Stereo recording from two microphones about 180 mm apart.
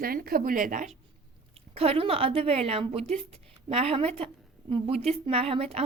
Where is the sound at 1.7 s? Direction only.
35° right (ahead or behind).